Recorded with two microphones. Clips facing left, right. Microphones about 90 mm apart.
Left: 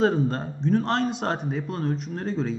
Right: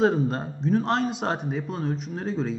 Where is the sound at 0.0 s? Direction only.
5° right (ahead or behind).